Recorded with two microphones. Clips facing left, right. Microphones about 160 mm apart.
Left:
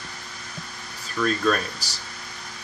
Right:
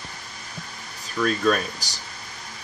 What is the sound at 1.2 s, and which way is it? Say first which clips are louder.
Speech: right 1 dB; 5° right (ahead or behind).